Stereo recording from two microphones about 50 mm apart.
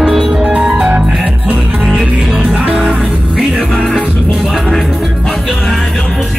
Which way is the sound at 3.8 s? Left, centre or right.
Centre.